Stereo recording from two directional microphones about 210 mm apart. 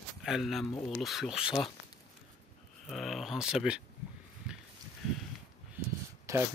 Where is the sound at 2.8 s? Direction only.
Centre (ahead or behind).